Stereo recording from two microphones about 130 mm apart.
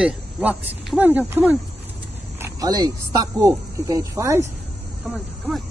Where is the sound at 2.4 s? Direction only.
30° right (ahead or behind).